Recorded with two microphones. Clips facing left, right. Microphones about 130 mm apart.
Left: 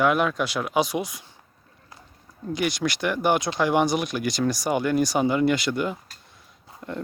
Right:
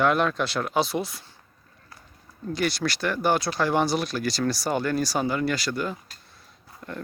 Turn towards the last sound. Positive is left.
turn(degrees=20)  # may be behind; listen again after turning